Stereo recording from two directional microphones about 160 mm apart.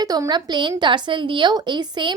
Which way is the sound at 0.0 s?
25° right (ahead or behind).